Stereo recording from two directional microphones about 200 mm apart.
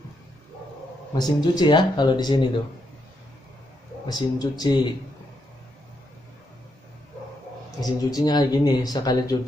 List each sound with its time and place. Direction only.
1.1 s speech: 20° left (ahead or behind)
4.1 s speech: 20° left (ahead or behind)
7.8 s speech: 20° left (ahead or behind)